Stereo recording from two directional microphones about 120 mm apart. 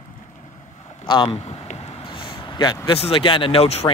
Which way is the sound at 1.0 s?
45° left (ahead or behind).